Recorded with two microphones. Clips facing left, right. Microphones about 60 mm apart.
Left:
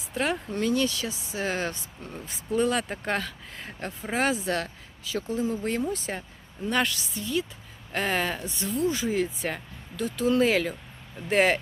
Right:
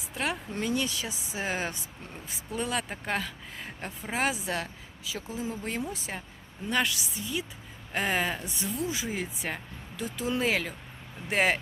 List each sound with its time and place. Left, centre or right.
0.1 s speech: centre
0.5 s speech: centre
8.4 s speech: centre
8.7 s speech: centre